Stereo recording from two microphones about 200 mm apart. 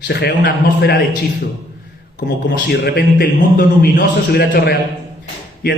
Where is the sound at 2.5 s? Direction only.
50° left (ahead or behind).